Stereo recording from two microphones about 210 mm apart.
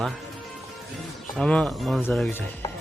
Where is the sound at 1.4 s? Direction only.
5° left (ahead or behind).